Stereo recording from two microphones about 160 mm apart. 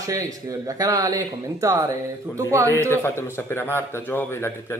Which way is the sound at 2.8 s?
15° left (ahead or behind).